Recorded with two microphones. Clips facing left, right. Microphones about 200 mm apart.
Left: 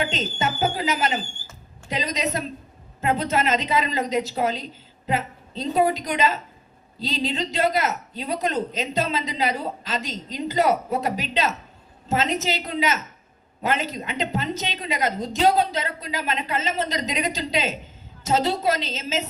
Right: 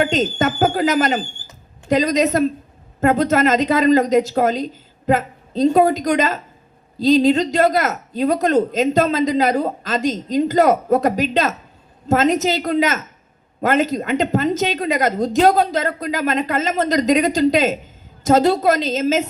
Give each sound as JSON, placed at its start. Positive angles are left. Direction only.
{"t": 0.0, "sound": "speech", "side_deg": -50}